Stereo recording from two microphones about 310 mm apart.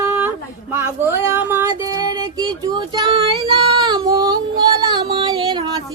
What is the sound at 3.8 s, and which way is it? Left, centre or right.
Female singing, centre.